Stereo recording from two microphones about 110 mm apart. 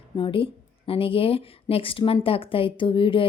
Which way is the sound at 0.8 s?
55° left (ahead or behind).